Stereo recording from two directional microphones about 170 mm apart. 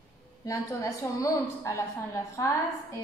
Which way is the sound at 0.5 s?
20° left (ahead or behind).